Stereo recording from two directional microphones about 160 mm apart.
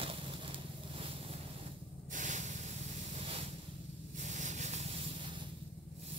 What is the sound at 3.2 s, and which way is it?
Ocean, 35° right (ahead or behind).